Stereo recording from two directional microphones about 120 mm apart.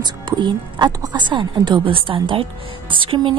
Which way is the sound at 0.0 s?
40° right (ahead or behind).